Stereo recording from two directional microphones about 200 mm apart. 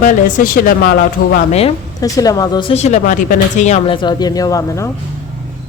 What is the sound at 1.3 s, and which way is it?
Speech, 30° left (ahead or behind).